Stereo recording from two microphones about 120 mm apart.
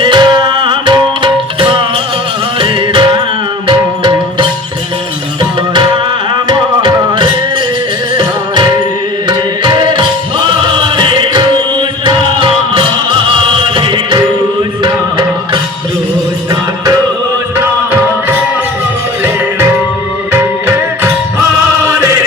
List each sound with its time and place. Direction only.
0.0 s music: 40° right (ahead or behind)
6.5 s music: 40° right (ahead or behind)
20.3 s music: 20° right (ahead or behind)